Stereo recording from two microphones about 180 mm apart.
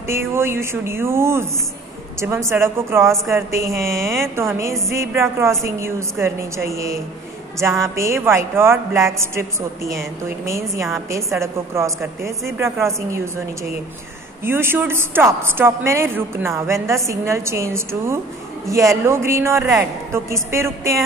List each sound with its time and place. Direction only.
0.0 s a woman's voice: 15° right (ahead or behind)
11.3 s a woman's voice: 15° right (ahead or behind)
14.4 s a woman's voice: 15° right (ahead or behind)